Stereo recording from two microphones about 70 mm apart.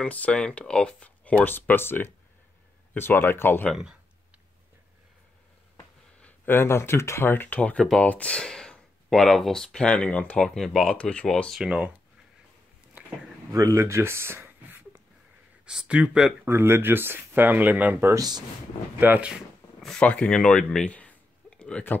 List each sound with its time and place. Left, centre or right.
0.0 s speech: centre
6.2 s speech: left
10.4 s speech: centre
11.0 s speech: centre
11.6 s speech: centre
13.5 s speech: right
15.6 s speech: centre
16.4 s speech: right
18.1 s speech: right
18.9 s speech: right
20.0 s speech: centre